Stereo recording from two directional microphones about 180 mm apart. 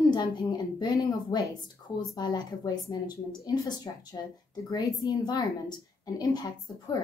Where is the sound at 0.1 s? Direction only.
20° left (ahead or behind).